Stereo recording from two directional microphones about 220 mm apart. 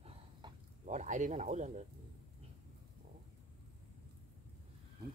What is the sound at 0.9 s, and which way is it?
Speech, 35° right (ahead or behind).